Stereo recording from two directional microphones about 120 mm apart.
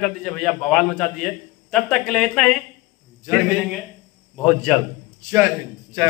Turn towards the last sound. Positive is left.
turn(degrees=-20)  # may be behind; listen again after turning